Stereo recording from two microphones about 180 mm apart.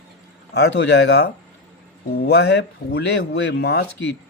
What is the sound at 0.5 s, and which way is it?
Speech, 70° left (ahead or behind).